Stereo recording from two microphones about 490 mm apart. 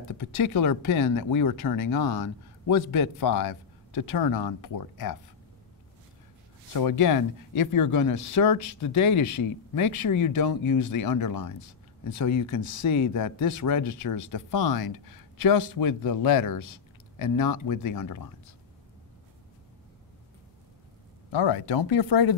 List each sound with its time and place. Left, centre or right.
0.1 s speech: left
6.7 s speech: left
21.3 s speech: left